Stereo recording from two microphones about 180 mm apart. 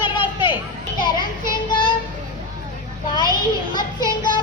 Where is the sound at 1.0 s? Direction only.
25° left (ahead or behind).